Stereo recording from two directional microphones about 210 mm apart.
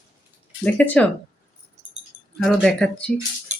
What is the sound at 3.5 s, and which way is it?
Music, 35° right (ahead or behind).